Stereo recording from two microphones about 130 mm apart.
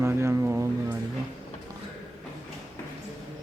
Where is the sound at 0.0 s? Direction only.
20° right (ahead or behind).